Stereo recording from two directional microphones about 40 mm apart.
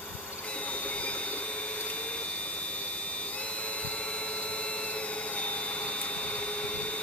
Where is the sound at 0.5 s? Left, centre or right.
Left.